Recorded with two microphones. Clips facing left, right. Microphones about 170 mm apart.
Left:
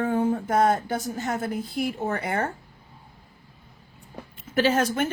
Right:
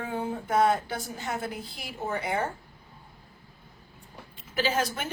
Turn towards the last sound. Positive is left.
turn(degrees=55)  # may be behind; listen again after turning